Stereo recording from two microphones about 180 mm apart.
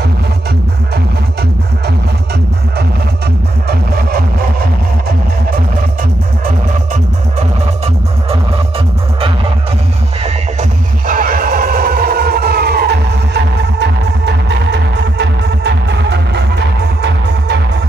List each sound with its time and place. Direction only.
3.6 s music: 55° right (ahead or behind)
6.4 s music: 40° right (ahead or behind)
10.2 s music: 45° right (ahead or behind); by 17.6 s 70° right (ahead or behind)